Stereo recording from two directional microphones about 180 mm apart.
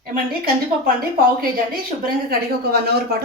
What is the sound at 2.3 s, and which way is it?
Speech, 60° right (ahead or behind).